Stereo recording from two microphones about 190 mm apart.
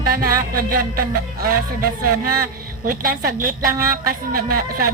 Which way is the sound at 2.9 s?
50° right (ahead or behind).